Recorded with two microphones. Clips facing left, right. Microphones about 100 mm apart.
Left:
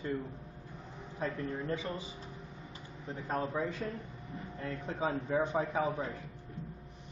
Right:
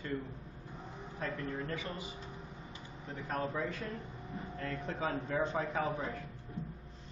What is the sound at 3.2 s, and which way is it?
A man's voice, 20° left (ahead or behind).